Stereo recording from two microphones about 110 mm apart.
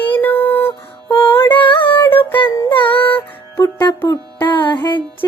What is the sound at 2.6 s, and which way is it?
Music, 50° left (ahead or behind).